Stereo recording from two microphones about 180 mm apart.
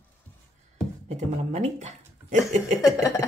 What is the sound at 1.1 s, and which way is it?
Speech, 40° right (ahead or behind).